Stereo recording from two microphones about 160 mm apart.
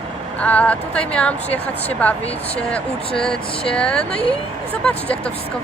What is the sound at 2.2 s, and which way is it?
Speech, 40° left (ahead or behind).